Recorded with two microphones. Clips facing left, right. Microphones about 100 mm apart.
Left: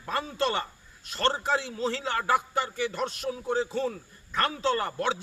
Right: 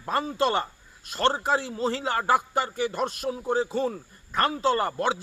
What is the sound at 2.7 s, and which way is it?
Speech, 45° right (ahead or behind).